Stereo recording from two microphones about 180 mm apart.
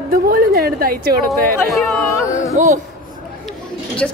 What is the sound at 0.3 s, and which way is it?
Speech, 55° right (ahead or behind).